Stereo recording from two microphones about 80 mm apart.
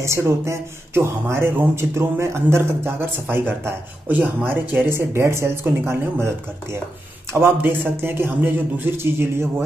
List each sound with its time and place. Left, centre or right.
0.0 s a man's voice: right